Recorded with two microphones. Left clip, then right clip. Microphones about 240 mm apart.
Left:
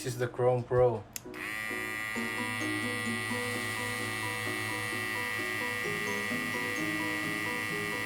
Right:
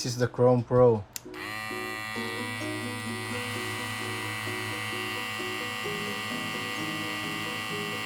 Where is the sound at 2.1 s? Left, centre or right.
Centre.